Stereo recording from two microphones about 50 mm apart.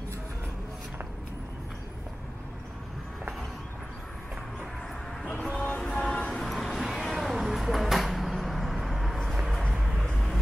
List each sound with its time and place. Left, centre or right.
5.6 s music: left
6.4 s a sound: centre
9.3 s vehicle: centre
10.0 s vehicle: centre